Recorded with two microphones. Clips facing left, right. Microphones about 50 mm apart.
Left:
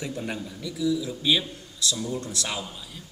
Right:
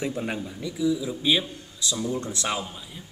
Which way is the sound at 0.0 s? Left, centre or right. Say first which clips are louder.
Right 3 dB; right.